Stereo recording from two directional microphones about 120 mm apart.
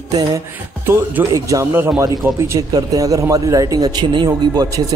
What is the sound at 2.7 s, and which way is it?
A man's voice, 30° right (ahead or behind).